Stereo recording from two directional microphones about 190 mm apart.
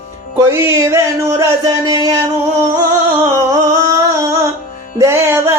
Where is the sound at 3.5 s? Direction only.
15° right (ahead or behind).